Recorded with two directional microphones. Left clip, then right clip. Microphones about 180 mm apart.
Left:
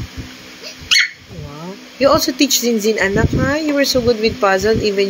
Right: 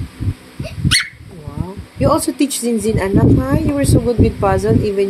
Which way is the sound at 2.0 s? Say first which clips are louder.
Left 2 dB; 15° right (ahead or behind).